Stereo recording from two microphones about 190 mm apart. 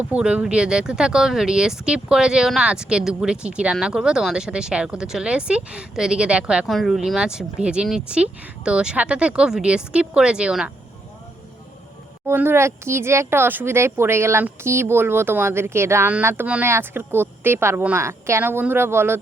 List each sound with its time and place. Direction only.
0.1 s speech: 5° right (ahead or behind)
12.2 s speech: 10° right (ahead or behind)